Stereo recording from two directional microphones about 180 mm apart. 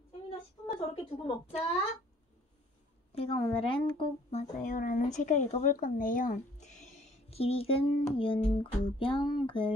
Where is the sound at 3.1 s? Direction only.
30° left (ahead or behind).